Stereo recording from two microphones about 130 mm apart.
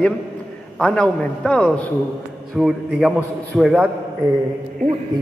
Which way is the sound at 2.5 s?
Centre (ahead or behind).